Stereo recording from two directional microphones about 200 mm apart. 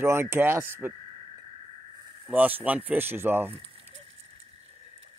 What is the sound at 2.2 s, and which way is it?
Speech, 10° right (ahead or behind).